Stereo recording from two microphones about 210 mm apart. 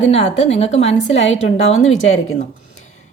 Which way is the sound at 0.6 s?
30° left (ahead or behind).